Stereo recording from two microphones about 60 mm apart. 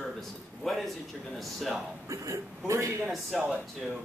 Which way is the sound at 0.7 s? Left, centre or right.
Centre.